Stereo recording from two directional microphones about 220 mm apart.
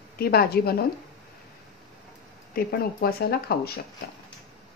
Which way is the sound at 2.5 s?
45° left (ahead or behind).